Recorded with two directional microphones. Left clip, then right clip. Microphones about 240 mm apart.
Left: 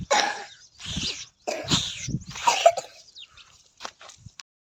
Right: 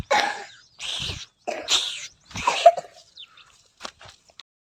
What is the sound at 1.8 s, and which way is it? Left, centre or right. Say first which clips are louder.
Dog: right 2 dB; centre.